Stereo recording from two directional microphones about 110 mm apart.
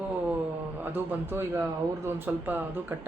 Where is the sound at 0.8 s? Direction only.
20° right (ahead or behind).